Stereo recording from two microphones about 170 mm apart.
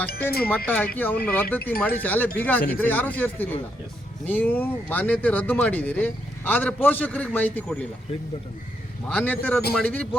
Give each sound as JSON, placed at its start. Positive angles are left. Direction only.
{"t": 0.1, "sound": "speech", "side_deg": 65}
{"t": 0.9, "sound": "speech", "side_deg": 10}
{"t": 9.0, "sound": "speech", "side_deg": 5}